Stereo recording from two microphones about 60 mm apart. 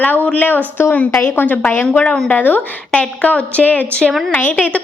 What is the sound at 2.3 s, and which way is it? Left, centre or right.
A woman's voice, left.